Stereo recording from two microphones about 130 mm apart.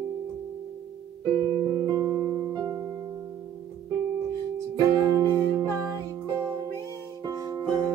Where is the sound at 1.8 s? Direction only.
30° right (ahead or behind).